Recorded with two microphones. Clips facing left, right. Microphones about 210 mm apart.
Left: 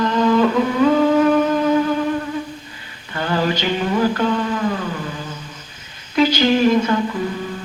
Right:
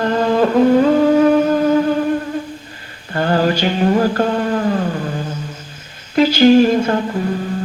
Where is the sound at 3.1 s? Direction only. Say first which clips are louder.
Right 4 dB; 45° right (ahead or behind).